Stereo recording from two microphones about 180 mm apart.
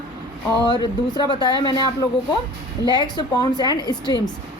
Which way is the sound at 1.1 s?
25° left (ahead or behind).